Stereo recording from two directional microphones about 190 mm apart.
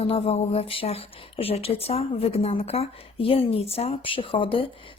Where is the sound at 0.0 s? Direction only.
30° left (ahead or behind).